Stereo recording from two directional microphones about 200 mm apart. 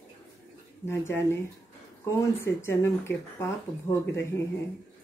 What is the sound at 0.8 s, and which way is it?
Speech, 10° left (ahead or behind).